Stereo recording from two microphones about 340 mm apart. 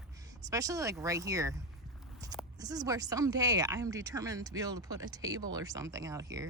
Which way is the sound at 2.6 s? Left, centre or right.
Centre.